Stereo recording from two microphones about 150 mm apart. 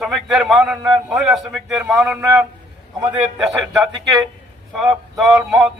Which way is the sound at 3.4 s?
Centre (ahead or behind).